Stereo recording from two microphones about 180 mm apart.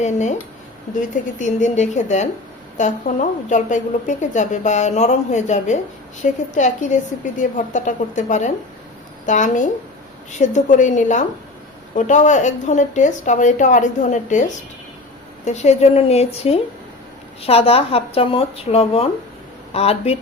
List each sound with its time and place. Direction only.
0.0 s a woman's voice: 40° left (ahead or behind)